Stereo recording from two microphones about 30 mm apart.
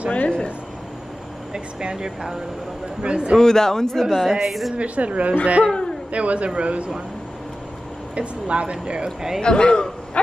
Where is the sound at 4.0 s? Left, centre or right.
Centre.